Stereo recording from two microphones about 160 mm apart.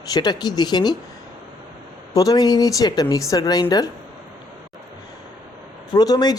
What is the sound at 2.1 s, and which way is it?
A woman's voice, 25° left (ahead or behind).